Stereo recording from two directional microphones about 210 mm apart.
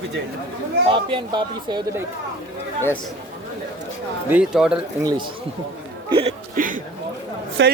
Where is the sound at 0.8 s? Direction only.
25° right (ahead or behind).